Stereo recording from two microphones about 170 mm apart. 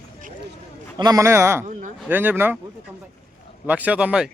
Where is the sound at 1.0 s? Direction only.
20° right (ahead or behind).